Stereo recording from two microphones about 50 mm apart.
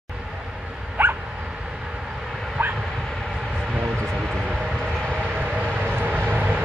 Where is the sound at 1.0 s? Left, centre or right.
Right.